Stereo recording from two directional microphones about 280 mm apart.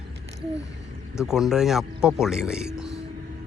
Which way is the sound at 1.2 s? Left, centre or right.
Centre.